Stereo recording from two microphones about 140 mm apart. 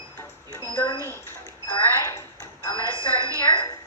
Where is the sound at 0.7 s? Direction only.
25° left (ahead or behind).